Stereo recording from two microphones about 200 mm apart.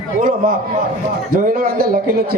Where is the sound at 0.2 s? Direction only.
45° right (ahead or behind).